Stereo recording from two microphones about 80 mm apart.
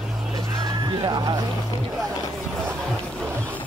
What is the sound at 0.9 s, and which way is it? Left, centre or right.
Speech, right.